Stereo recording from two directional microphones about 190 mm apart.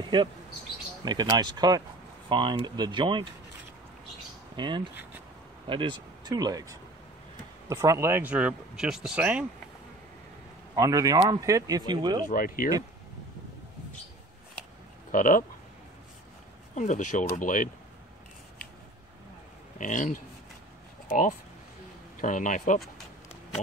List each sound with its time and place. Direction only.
1.0 s speech: 20° right (ahead or behind)
4.6 s speech: 25° right (ahead or behind); by 9.5 s 5° right (ahead or behind)
10.8 s speech: 20° right (ahead or behind)
12.3 s speech: 45° left (ahead or behind)
15.0 s speech: 45° left (ahead or behind)
16.7 s speech: 40° left (ahead or behind)
19.8 s speech: 40° left (ahead or behind)